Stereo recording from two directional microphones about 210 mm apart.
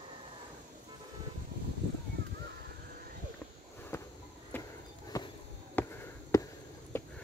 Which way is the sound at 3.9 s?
15° left (ahead or behind).